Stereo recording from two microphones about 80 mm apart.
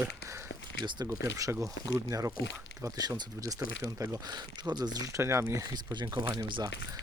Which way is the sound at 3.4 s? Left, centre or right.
Right.